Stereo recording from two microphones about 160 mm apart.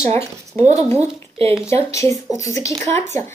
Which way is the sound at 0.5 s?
45° right (ahead or behind).